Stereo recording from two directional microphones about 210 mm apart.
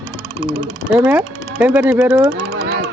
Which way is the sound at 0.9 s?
5° right (ahead or behind).